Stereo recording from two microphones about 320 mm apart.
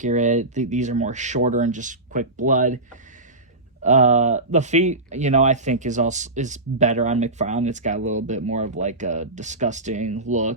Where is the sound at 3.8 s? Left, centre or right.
Right.